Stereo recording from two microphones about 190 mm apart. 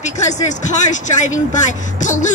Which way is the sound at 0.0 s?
40° left (ahead or behind).